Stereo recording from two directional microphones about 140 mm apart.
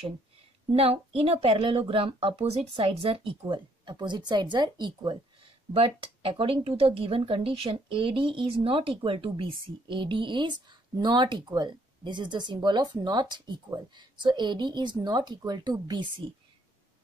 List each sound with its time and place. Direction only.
0.7 s speech: 45° right (ahead or behind)